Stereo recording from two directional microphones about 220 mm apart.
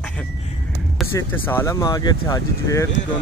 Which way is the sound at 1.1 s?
10° left (ahead or behind).